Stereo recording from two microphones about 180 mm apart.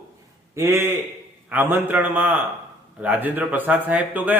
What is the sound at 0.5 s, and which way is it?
A man's voice, 15° right (ahead or behind).